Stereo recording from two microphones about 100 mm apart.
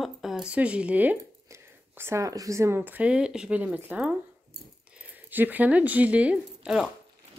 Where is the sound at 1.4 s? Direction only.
25° right (ahead or behind); by 6.8 s 10° right (ahead or behind).